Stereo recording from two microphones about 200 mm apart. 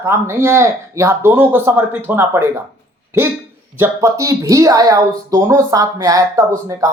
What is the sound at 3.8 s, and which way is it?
Speech, 15° right (ahead or behind).